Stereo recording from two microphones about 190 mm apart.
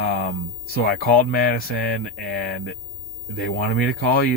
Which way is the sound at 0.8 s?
50° left (ahead or behind).